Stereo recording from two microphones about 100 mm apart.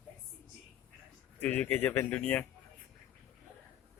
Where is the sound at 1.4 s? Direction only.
15° left (ahead or behind).